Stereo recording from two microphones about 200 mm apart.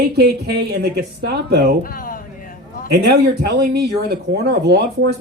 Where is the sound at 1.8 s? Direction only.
45° left (ahead or behind).